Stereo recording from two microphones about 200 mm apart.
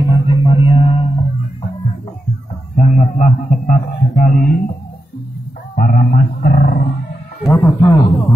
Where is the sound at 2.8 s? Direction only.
35° left (ahead or behind).